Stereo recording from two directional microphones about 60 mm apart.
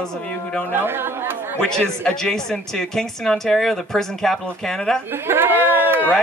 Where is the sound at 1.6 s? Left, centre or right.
Centre.